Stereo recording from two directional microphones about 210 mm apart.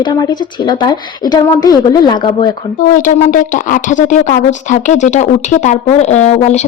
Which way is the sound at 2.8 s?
40° left (ahead or behind).